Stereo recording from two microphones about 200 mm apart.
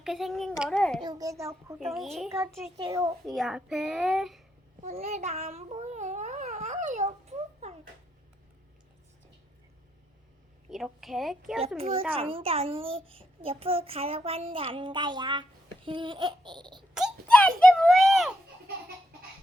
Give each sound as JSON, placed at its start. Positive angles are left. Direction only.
{"t": 0.0, "sound": "a child's voice", "side_deg": 0}
{"t": 1.0, "sound": "a child's voice", "side_deg": -20}
{"t": 1.9, "sound": "a child's voice", "side_deg": 0}
{"t": 2.7, "sound": "a child's voice", "side_deg": -20}
{"t": 3.2, "sound": "a child's voice", "side_deg": 0}
{"t": 4.8, "sound": "babbling", "side_deg": -35}
{"t": 10.7, "sound": "a child's voice", "side_deg": 0}
{"t": 12.1, "sound": "a child's voice", "side_deg": -30}
{"t": 16.9, "sound": "a sound", "side_deg": 0}